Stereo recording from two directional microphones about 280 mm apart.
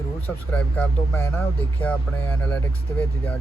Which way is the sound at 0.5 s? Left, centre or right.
Centre.